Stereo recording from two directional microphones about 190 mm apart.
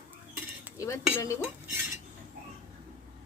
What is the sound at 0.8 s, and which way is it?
Speech, 15° left (ahead or behind).